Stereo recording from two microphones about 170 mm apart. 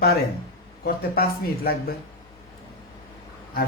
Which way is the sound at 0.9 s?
65° left (ahead or behind).